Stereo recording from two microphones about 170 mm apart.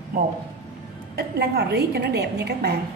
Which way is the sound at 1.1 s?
70° right (ahead or behind).